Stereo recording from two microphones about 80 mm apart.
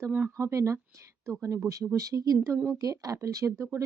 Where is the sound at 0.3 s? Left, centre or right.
Right.